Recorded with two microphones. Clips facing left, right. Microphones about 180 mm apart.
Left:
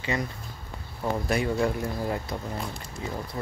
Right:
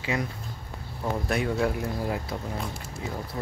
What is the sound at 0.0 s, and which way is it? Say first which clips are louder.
Speech: even; 5° right (ahead or behind).